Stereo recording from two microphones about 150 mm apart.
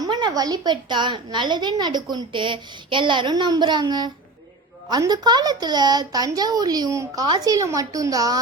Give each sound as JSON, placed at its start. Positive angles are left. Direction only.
{"t": 0.0, "sound": "a child's voice", "side_deg": -30}